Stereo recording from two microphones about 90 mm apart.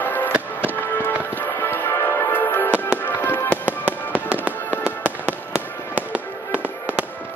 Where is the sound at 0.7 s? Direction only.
20° left (ahead or behind).